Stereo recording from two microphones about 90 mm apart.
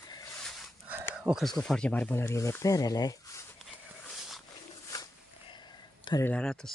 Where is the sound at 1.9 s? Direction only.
20° left (ahead or behind).